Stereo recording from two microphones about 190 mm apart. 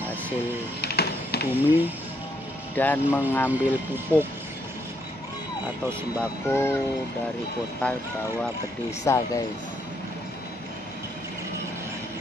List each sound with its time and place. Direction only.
0.7 s a sound: 55° left (ahead or behind)
1.5 s speech: 10° right (ahead or behind)
2.7 s speech: 10° left (ahead or behind)
3.4 s speech: 10° right (ahead or behind)
6.4 s speech: 15° left (ahead or behind)
7.8 s speech: 10° left (ahead or behind)
9.0 s speech: 20° left (ahead or behind)